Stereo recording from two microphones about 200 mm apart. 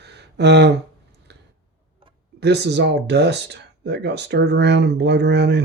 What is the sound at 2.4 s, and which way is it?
Speech, 55° right (ahead or behind).